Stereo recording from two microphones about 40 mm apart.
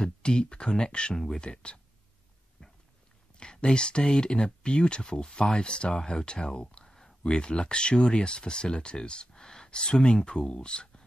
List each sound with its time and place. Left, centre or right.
0.0 s speech: left
3.3 s speech: left
6.9 s speech: centre